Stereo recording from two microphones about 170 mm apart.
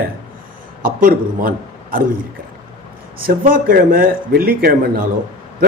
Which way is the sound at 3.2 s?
55° right (ahead or behind).